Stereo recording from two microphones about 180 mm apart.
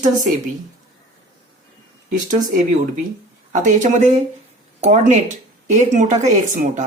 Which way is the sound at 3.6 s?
45° right (ahead or behind).